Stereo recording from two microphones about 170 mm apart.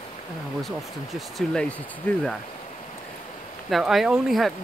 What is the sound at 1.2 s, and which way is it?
Speech, centre (ahead or behind).